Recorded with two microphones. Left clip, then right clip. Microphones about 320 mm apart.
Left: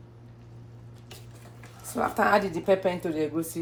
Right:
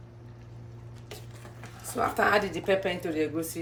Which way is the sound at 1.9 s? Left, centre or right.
Centre.